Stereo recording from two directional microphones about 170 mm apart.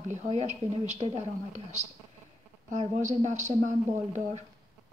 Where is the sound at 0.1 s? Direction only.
40° right (ahead or behind).